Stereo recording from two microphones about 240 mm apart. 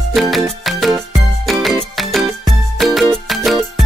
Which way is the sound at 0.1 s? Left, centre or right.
Centre.